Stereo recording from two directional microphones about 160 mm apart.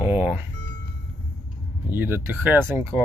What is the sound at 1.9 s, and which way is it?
Speech, 15° right (ahead or behind).